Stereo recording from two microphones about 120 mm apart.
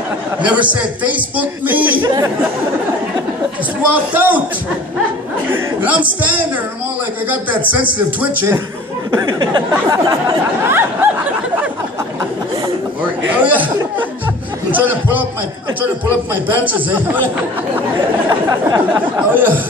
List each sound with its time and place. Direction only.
0.4 s a man's voice: 10° right (ahead or behind)
2.0 s a sound: 35° right (ahead or behind)
3.9 s a man's voice: 15° right (ahead or behind)
5.8 s a man's voice: 15° right (ahead or behind)
9.1 s a sound: 40° right (ahead or behind); by 11.1 s 20° right (ahead or behind)
13.3 s a man's voice: 15° right (ahead or behind)
14.7 s a man's voice: 15° right (ahead or behind)
16.4 s a man's voice: 15° right (ahead or behind)
18.9 s a man's voice: 15° right (ahead or behind)